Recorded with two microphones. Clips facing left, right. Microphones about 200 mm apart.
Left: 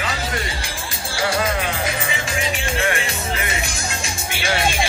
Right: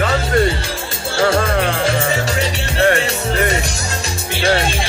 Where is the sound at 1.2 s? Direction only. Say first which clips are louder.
Right 6 dB; 45° right (ahead or behind); by 2.9 s 65° right (ahead or behind).